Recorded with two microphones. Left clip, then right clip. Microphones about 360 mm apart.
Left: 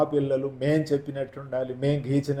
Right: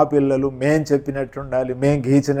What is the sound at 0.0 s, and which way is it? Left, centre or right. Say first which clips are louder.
Speech: right 7 dB; right.